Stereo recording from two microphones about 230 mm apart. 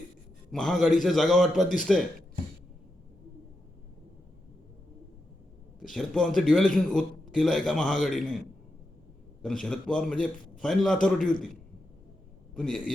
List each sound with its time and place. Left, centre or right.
0.5 s a man's voice: centre
1.6 s a man's voice: left
5.9 s a man's voice: centre
9.4 s a man's voice: centre
11.2 s a man's voice: left
12.5 s a man's voice: centre